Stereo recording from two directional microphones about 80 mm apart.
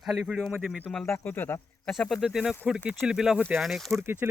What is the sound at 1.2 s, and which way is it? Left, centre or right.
Speech, left.